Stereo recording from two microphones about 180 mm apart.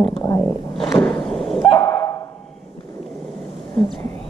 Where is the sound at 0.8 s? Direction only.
10° left (ahead or behind).